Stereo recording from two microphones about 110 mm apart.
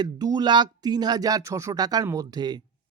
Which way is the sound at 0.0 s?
40° right (ahead or behind).